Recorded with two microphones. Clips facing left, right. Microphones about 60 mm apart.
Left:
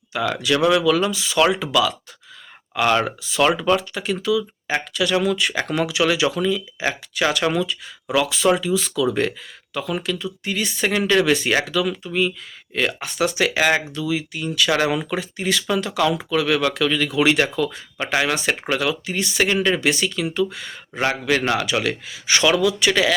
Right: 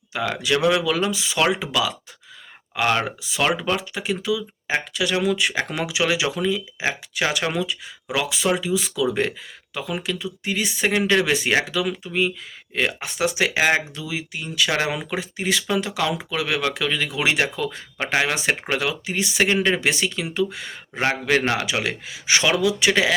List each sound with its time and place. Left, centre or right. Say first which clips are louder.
0.1 s speech: left 2 dB; right
17.6 s speech: left 3 dB; right